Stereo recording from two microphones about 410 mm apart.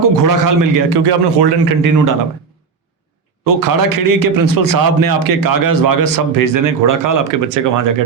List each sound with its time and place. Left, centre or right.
0.0 s a man's voice: right
1.8 s a man's voice: right
3.4 s a man's voice: right